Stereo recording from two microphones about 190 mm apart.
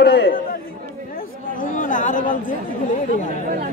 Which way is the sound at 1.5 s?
45° left (ahead or behind).